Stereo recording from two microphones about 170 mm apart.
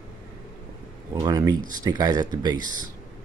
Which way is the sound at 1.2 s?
20° right (ahead or behind).